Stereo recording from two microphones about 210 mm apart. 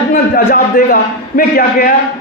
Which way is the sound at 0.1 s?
45° left (ahead or behind).